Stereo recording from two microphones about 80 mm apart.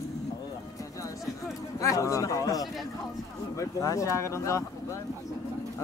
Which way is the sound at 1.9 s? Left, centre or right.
Left.